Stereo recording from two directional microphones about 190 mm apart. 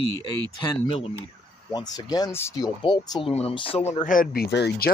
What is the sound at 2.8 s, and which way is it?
Speech, 25° left (ahead or behind).